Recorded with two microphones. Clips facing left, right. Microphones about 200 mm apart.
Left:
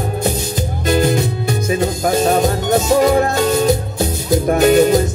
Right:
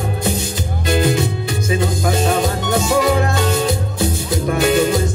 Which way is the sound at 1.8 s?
50° left (ahead or behind).